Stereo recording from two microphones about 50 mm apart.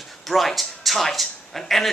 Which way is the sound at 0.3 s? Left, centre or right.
Centre.